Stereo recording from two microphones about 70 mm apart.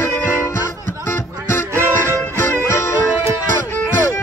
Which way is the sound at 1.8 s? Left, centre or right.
Right.